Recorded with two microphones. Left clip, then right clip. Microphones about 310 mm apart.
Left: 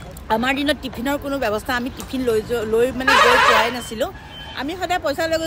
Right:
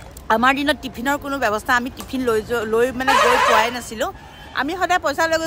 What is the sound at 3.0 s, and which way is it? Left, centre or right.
Speech, right.